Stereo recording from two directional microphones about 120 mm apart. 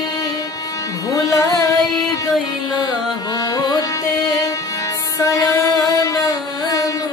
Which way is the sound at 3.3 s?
30° left (ahead or behind).